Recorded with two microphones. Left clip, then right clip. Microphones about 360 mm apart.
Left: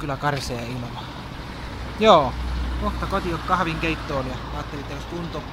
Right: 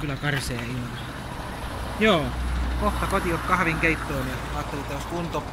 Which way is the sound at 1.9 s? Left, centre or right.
Left.